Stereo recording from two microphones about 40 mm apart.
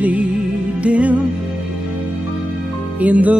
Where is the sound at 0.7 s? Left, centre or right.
Right.